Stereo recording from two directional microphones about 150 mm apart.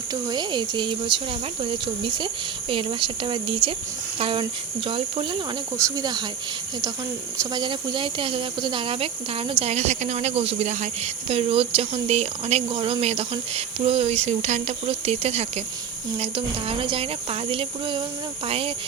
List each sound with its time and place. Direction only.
0.1 s speech: 30° right (ahead or behind)
5.7 s speech: 25° right (ahead or behind)
7.3 s speech: 30° right (ahead or behind)